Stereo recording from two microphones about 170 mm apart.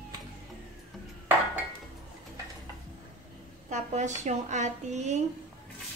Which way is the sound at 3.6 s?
45° right (ahead or behind).